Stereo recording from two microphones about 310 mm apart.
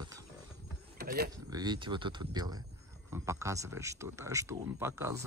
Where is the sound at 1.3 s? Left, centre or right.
Centre.